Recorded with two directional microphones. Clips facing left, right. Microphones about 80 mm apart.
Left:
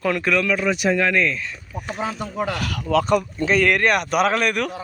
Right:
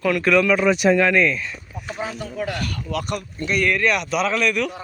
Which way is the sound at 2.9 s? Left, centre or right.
Left.